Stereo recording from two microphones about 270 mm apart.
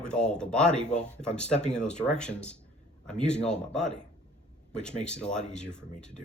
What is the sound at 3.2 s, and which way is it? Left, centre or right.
Speech, left.